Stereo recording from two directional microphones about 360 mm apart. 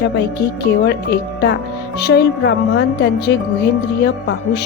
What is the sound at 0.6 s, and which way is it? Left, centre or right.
A woman's voice, left.